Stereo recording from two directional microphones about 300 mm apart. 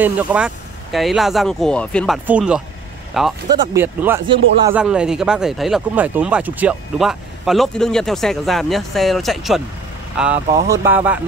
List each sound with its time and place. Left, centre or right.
0.0 s speech: centre